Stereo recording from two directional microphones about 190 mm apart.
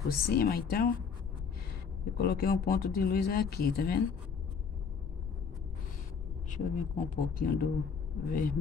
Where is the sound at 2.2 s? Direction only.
55° left (ahead or behind).